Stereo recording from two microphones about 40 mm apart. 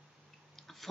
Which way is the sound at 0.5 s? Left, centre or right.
Centre.